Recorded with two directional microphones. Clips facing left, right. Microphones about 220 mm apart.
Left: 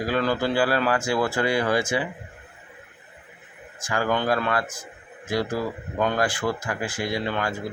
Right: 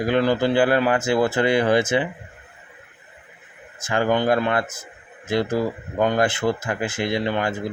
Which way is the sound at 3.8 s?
20° right (ahead or behind).